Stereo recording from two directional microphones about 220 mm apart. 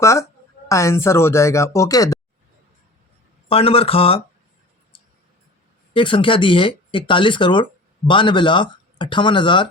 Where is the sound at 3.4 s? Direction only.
25° left (ahead or behind).